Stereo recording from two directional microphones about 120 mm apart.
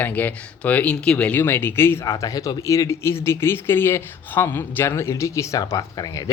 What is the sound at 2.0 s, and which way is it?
Speech, 30° left (ahead or behind).